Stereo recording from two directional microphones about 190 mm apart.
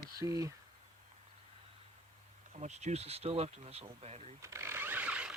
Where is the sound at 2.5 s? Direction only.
35° right (ahead or behind).